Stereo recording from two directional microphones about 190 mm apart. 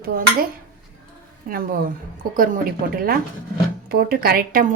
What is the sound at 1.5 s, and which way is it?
Speech, 45° right (ahead or behind).